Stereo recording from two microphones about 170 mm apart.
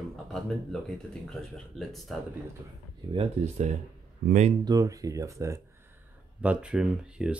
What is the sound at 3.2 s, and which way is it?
Speech, 40° right (ahead or behind).